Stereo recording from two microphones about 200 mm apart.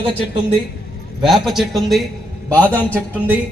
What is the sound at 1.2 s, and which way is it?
A man's voice, centre (ahead or behind).